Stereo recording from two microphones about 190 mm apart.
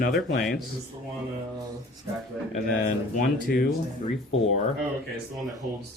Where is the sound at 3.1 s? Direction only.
50° left (ahead or behind).